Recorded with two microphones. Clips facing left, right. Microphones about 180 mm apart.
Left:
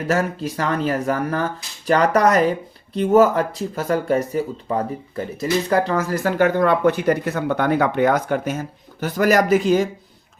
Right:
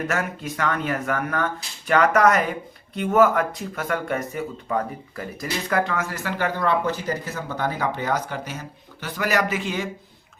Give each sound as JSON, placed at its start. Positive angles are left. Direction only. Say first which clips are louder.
{"t": 0.1, "sound": "speech", "louder": "left 6 dB", "side_deg": 30}